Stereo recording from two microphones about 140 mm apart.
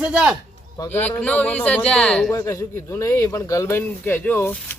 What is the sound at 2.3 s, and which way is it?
Speech, 20° left (ahead or behind).